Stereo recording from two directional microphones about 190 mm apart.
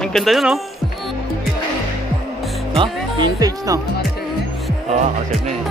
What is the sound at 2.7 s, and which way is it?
Speech, 25° right (ahead or behind).